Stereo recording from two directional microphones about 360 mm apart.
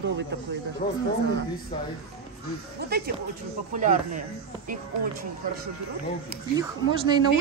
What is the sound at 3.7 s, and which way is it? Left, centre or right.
Speech, right.